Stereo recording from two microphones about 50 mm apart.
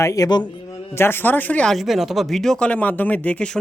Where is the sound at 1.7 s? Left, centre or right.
Centre.